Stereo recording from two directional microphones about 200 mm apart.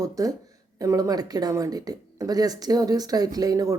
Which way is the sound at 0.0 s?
15° right (ahead or behind).